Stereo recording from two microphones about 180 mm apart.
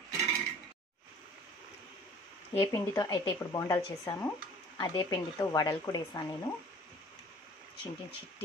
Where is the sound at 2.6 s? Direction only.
15° left (ahead or behind).